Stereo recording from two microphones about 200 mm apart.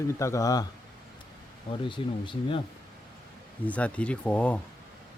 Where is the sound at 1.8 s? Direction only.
25° left (ahead or behind).